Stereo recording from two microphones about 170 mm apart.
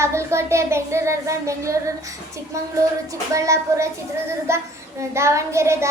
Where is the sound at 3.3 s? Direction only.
20° right (ahead or behind).